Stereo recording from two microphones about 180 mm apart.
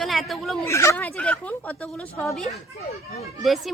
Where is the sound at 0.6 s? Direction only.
15° left (ahead or behind).